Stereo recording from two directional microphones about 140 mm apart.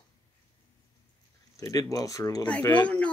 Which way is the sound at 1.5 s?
25° left (ahead or behind).